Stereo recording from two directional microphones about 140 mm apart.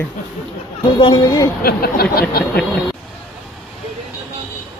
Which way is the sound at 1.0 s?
30° left (ahead or behind).